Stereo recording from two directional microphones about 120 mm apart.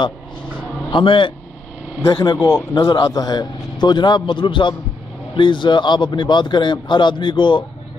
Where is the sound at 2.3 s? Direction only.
25° left (ahead or behind).